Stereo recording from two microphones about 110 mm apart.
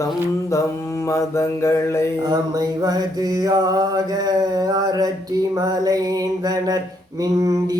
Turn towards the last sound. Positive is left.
turn(degrees=-35)  # may be behind; listen again after turning